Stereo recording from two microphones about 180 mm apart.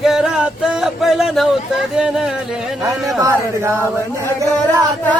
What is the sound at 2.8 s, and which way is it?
Speech, 15° right (ahead or behind).